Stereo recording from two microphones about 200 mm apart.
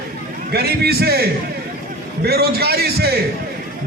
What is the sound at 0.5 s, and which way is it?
A man's voice, 50° right (ahead or behind).